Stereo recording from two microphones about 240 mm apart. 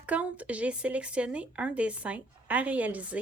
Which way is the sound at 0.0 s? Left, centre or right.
Centre.